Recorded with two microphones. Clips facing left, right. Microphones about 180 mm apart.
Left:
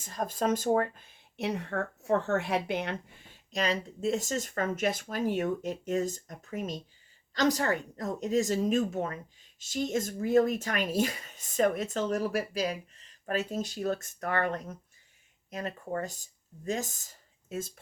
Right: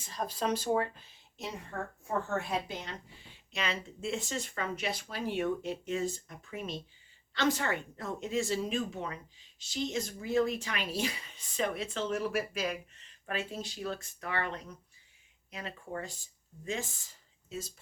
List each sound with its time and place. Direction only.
0.0 s speech: 50° left (ahead or behind)